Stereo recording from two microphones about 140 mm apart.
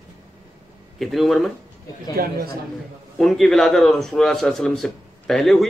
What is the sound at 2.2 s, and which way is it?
Speech, 90° right.